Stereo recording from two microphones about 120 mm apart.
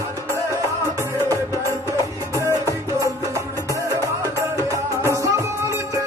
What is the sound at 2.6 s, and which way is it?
Music, 25° right (ahead or behind).